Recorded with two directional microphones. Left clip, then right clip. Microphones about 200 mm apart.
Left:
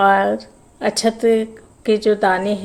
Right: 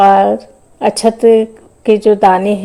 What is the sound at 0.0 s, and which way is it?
A woman's voice, 25° right (ahead or behind).